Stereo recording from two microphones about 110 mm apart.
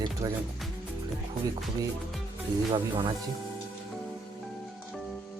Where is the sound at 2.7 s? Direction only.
45° right (ahead or behind).